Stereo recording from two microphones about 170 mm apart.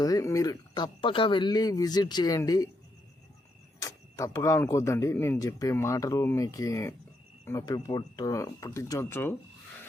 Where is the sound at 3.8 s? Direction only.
20° left (ahead or behind).